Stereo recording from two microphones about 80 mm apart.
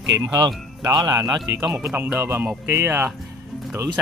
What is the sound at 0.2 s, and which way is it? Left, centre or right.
A man's voice, right.